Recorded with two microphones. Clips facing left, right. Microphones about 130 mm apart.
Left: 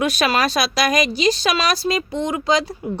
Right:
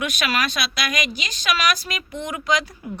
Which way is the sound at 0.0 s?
35° left (ahead or behind).